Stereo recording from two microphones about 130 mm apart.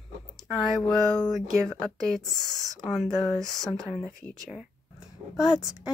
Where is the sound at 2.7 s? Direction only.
Centre (ahead or behind).